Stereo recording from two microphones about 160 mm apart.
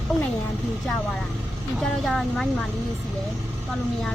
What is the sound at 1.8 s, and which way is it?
Speech, centre (ahead or behind).